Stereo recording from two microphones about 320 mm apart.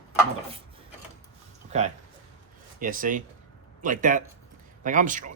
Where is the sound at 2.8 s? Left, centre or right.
Right.